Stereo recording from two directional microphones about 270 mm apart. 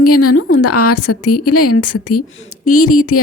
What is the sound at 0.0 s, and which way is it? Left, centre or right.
A woman's voice, left.